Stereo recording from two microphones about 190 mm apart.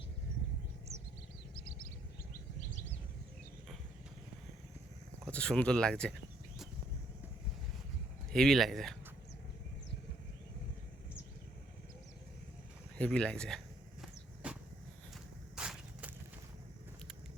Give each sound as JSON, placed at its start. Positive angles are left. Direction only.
{"t": 2.3, "sound": "bird", "side_deg": 45}
{"t": 5.2, "sound": "speech", "side_deg": 5}
{"t": 8.3, "sound": "speech", "side_deg": 0}
{"t": 13.0, "sound": "speech", "side_deg": 5}
{"t": 14.4, "sound": "a sound", "side_deg": -5}